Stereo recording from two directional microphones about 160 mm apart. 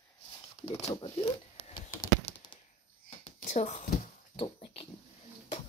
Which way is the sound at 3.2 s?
50° left (ahead or behind).